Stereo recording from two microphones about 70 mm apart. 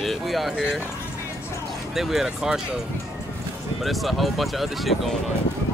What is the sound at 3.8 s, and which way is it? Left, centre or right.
Speech, centre.